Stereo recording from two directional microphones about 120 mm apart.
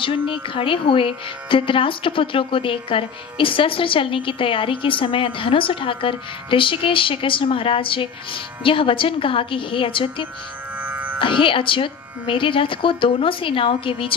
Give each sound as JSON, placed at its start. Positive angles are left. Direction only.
{"t": 0.0, "sound": "speech", "side_deg": 45}
{"t": 10.8, "sound": "music", "side_deg": -15}
{"t": 11.1, "sound": "speech", "side_deg": 45}